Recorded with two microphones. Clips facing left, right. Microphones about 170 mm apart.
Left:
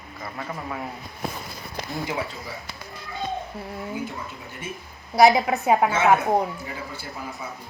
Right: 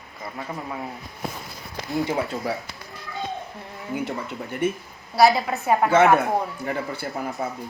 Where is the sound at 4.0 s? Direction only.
65° right (ahead or behind).